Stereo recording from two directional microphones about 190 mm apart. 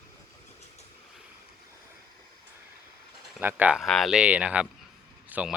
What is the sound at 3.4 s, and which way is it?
Speech, 10° right (ahead or behind).